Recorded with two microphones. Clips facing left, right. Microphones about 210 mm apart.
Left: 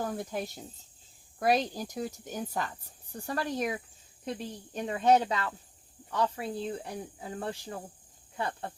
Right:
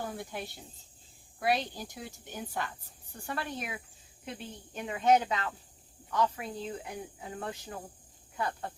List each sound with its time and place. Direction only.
0.0 s speech: 40° left (ahead or behind)